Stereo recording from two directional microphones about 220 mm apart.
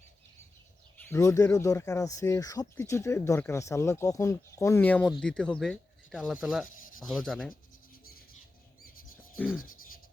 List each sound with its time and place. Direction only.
0.9 s speech: 10° left (ahead or behind)
8.8 s chirp: 40° left (ahead or behind)